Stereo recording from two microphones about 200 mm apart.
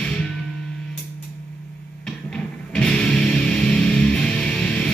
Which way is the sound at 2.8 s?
5° left (ahead or behind).